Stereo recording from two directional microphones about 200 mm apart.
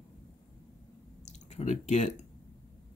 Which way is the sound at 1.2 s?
35° left (ahead or behind).